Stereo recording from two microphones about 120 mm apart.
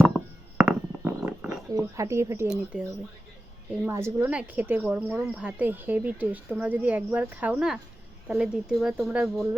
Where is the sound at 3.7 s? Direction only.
20° right (ahead or behind).